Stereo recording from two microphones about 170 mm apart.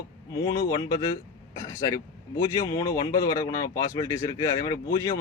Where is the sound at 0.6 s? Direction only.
20° left (ahead or behind).